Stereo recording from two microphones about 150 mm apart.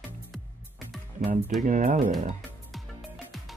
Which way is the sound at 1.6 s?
60° right (ahead or behind).